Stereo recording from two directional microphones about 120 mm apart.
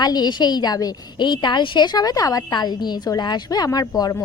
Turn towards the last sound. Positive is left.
turn(degrees=30)  # may be behind; listen again after turning